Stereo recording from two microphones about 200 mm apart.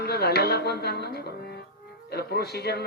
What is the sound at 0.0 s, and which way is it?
Speech, 55° left (ahead or behind).